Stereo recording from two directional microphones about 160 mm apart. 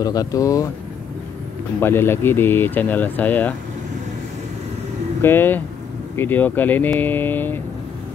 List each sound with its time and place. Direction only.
0.0 s speech: 25° left (ahead or behind)
1.8 s speech: 15° left (ahead or behind)
5.2 s speech: 15° left (ahead or behind)